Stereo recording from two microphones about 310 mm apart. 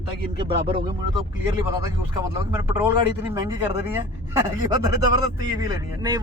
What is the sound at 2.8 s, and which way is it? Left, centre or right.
Speech, centre.